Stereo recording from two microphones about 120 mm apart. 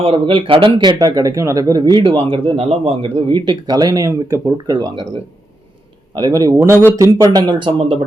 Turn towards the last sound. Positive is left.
turn(degrees=-45)  # may be behind; listen again after turning